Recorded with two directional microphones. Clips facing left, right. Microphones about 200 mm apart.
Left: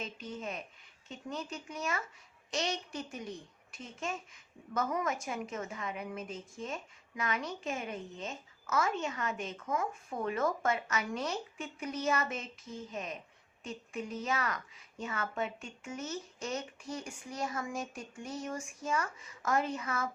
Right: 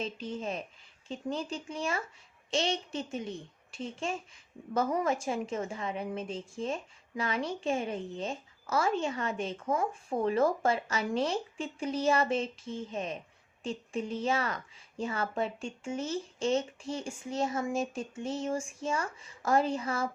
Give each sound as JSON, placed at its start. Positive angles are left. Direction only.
{"t": 0.0, "sound": "a woman's voice", "side_deg": -30}